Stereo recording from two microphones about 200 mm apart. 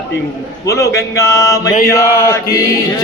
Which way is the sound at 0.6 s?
15° left (ahead or behind).